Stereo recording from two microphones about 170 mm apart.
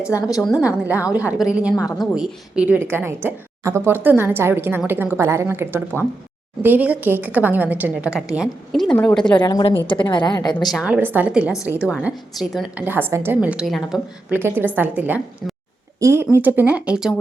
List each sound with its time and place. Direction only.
0.2 s a woman's voice: 20° left (ahead or behind)
1.1 s a woman's voice: 10° right (ahead or behind)
9.4 s a woman's voice: 25° left (ahead or behind)
10.7 s a woman's voice: 5° right (ahead or behind)